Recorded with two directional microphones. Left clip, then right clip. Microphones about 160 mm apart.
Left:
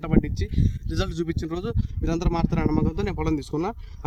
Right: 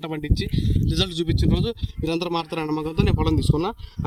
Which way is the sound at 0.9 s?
5° left (ahead or behind).